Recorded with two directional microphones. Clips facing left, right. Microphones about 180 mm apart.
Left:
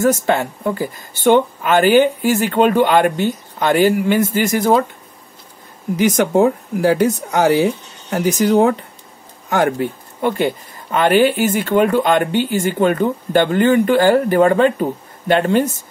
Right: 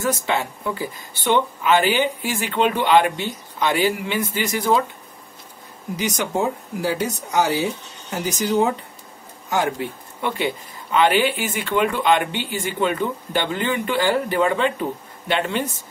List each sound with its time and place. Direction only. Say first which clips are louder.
0.0 s speech: left 7 dB; 50° left (ahead or behind)
5.9 s speech: left 9 dB; 55° left (ahead or behind)